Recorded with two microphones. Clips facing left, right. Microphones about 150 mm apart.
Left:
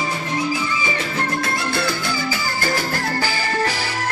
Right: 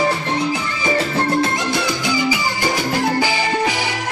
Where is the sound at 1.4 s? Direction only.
15° right (ahead or behind).